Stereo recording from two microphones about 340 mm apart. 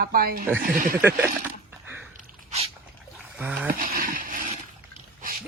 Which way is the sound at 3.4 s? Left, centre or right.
Centre.